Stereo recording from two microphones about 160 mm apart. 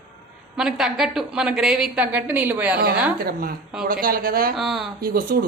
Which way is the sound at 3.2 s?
70° right (ahead or behind).